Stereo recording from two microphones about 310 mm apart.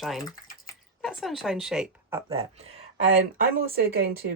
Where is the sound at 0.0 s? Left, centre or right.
Centre.